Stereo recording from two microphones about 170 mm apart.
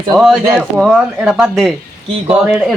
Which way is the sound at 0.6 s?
5° right (ahead or behind).